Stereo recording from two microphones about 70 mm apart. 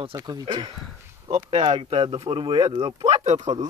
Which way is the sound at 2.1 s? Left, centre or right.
Right.